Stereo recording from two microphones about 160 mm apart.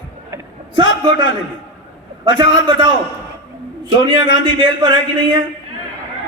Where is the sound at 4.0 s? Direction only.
30° right (ahead or behind).